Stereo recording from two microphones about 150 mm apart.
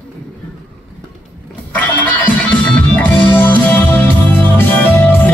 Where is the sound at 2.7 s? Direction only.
10° left (ahead or behind).